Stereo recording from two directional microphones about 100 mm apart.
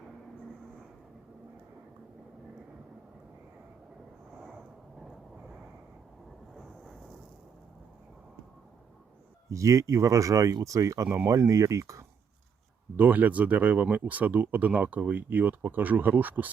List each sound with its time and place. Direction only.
6.5 s a sound: centre (ahead or behind)
9.5 s speech: 30° right (ahead or behind)
13.0 s speech: 15° right (ahead or behind)